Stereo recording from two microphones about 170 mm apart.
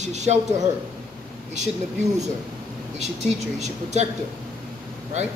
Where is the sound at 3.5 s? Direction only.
40° right (ahead or behind).